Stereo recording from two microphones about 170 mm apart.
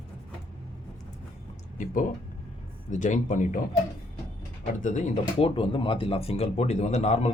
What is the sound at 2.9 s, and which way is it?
Speech, 45° left (ahead or behind).